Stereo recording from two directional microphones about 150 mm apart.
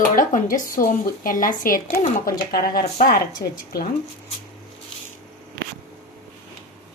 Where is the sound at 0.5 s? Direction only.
70° left (ahead or behind).